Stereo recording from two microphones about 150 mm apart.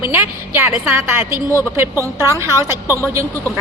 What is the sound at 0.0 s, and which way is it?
A woman's voice, 15° right (ahead or behind).